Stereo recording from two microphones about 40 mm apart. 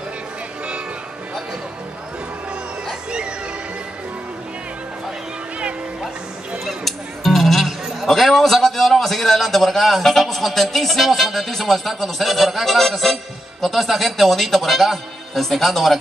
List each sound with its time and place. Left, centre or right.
3.1 s music: right
7.4 s a sound: centre
10.2 s speech: centre